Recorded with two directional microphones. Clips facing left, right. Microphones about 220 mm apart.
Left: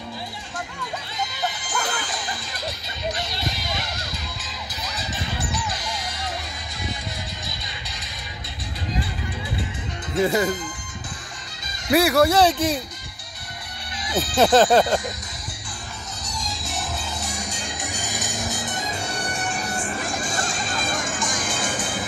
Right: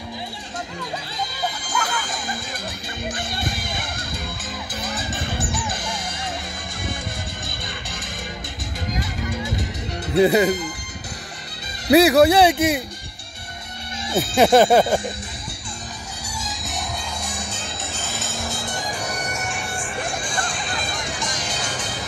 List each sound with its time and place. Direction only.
1.9 s music: 45° right (ahead or behind)
10.2 s speech: 15° right (ahead or behind)
11.9 s speech: 20° right (ahead or behind)
14.0 s music: 25° right (ahead or behind)
14.3 s speech: 10° right (ahead or behind)
16.3 s music: 5° right (ahead or behind); by 22.0 s 50° left (ahead or behind)